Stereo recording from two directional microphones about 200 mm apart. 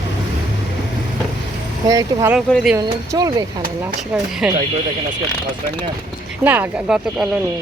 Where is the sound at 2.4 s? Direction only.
Centre (ahead or behind).